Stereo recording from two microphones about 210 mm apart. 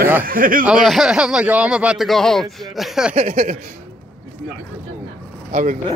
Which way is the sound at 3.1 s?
30° right (ahead or behind).